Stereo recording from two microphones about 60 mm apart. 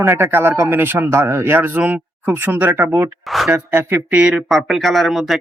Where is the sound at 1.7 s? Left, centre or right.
Right.